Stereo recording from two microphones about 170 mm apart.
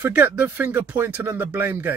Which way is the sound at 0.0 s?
10° right (ahead or behind).